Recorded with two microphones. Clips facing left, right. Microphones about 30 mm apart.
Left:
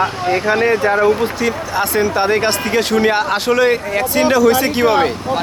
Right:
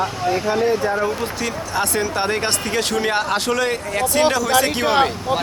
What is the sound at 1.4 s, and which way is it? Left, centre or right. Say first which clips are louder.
Speech: left 5 dB; centre.